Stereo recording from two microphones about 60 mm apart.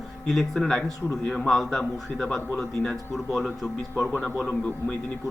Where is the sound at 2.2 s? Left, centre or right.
Centre.